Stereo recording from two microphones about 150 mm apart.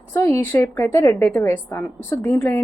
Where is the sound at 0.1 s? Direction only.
15° left (ahead or behind).